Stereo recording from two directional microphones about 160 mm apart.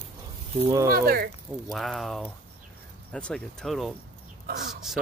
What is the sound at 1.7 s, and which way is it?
Speech, centre (ahead or behind).